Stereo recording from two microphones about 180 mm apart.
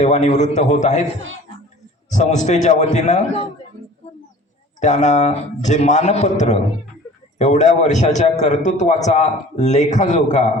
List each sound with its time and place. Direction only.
0.0 s a man's voice: 40° left (ahead or behind)
4.8 s a man's voice: 40° left (ahead or behind)